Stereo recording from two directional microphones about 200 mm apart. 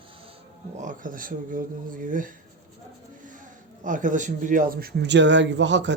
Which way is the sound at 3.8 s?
40° right (ahead or behind).